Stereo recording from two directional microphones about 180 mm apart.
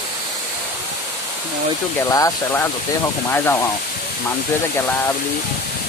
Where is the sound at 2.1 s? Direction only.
20° left (ahead or behind).